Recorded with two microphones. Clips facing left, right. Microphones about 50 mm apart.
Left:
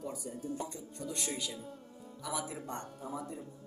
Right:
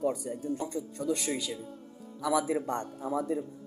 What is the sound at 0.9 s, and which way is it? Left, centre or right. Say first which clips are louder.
Speech: right 7 dB; right.